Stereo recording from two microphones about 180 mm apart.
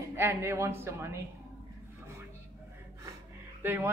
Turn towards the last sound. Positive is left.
turn(degrees=-10)  # may be behind; listen again after turning